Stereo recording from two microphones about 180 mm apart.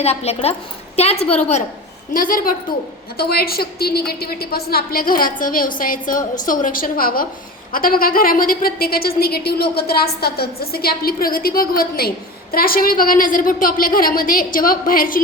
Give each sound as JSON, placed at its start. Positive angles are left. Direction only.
{"t": 0.0, "sound": "a woman's voice", "side_deg": 35}
{"t": 2.1, "sound": "a woman's voice", "side_deg": 50}